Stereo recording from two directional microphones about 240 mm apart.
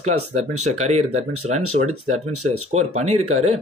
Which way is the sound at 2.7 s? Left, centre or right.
Right.